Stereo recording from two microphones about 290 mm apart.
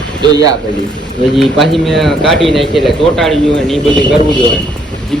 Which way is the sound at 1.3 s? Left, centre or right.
Centre.